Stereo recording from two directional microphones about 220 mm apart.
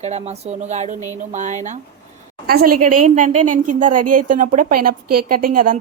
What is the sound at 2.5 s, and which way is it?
A woman's voice, 45° right (ahead or behind).